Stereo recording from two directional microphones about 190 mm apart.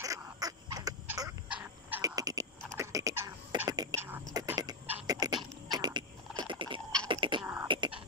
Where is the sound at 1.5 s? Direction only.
5° right (ahead or behind).